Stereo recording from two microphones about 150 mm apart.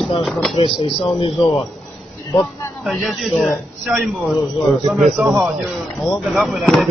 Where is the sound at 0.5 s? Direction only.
35° left (ahead or behind).